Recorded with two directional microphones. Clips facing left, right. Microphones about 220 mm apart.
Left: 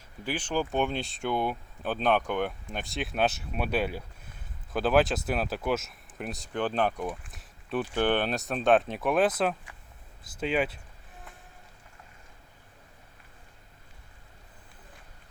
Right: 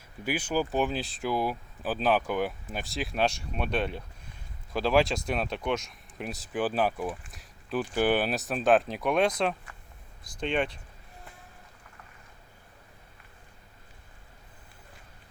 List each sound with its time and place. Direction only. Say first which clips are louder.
0.3 s speech: right 1 dB; 10° right (ahead or behind)